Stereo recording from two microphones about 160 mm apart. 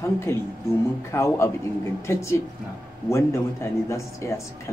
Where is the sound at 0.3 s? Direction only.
15° left (ahead or behind).